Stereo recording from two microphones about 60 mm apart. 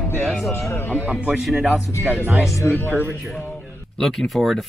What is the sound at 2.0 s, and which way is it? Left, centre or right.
Speech, right.